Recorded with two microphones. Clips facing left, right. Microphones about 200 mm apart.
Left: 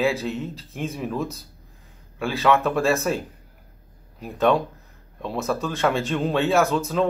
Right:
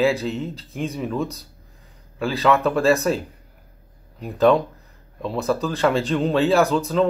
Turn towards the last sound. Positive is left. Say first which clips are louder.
# right 2 dB
turn(degrees=0)  # may be behind; listen again after turning